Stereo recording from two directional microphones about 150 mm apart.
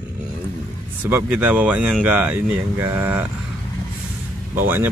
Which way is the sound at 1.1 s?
10° right (ahead or behind).